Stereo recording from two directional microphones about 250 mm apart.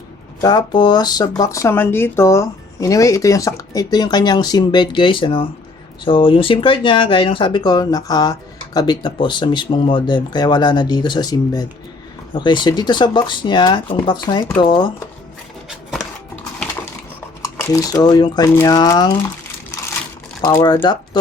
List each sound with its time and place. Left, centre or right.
0.4 s speech: centre
17.4 s speech: centre
20.4 s speech: centre